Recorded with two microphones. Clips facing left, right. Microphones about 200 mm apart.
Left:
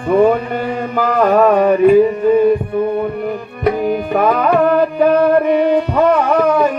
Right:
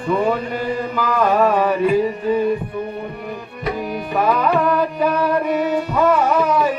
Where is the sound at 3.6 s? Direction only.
55° left (ahead or behind).